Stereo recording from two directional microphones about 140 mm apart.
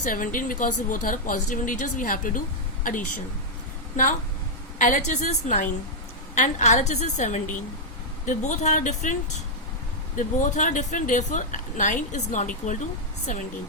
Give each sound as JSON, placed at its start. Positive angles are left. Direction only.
{"t": 0.0, "sound": "a woman's voice", "side_deg": 70}
{"t": 10.2, "sound": "a woman's voice", "side_deg": 65}